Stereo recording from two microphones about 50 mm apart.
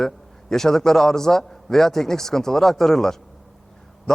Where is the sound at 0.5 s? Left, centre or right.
Centre.